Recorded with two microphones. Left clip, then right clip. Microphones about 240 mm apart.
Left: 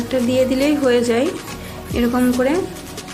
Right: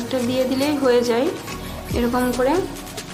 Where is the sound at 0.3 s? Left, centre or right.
Centre.